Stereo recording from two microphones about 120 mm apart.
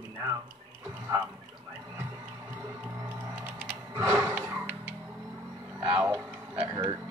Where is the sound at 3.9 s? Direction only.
25° right (ahead or behind).